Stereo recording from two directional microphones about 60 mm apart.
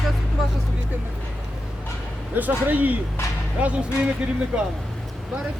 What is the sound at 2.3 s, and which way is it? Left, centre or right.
Speech, right.